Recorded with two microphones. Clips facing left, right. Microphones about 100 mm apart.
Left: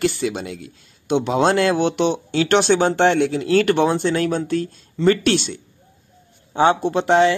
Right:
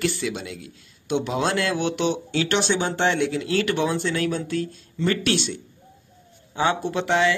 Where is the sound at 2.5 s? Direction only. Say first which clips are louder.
Left 9 dB; 55° left (ahead or behind).